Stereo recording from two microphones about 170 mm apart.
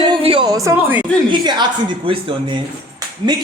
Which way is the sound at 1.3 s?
25° right (ahead or behind).